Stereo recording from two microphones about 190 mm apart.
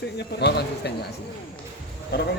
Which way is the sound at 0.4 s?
60° left (ahead or behind).